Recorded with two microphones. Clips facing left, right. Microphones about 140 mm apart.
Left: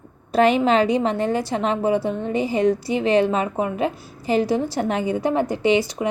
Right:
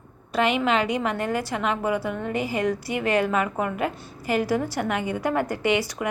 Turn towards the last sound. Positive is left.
turn(degrees=25)  # may be behind; listen again after turning